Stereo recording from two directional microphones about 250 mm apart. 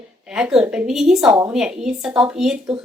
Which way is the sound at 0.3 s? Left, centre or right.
Centre.